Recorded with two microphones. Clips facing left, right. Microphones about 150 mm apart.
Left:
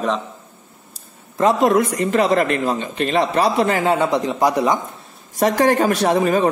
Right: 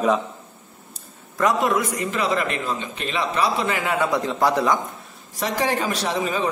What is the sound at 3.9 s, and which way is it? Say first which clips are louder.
Speech: left 3 dB; 20° left (ahead or behind).